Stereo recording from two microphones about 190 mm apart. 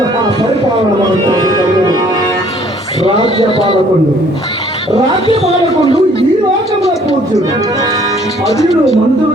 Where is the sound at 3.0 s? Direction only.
25° left (ahead or behind).